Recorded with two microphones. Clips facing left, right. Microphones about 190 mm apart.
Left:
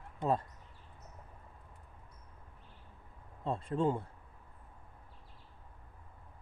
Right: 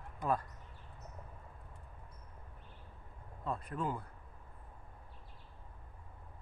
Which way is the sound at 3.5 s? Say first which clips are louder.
Left 6 dB; 25° left (ahead or behind).